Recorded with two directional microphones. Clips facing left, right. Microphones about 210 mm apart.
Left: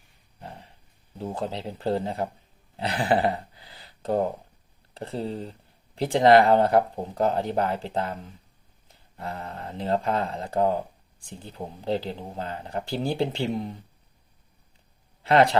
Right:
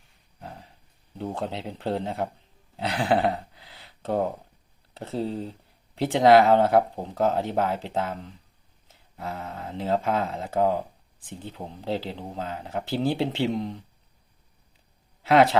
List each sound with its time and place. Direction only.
0.3 s dog: centre (ahead or behind)
1.2 s speech: centre (ahead or behind)
15.2 s speech: 5° right (ahead or behind)